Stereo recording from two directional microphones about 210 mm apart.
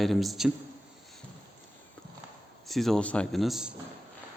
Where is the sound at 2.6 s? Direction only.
Centre (ahead or behind).